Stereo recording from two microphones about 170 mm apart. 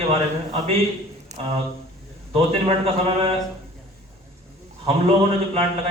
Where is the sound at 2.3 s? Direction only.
35° right (ahead or behind).